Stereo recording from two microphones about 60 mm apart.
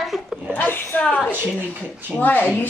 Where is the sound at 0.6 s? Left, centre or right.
Left.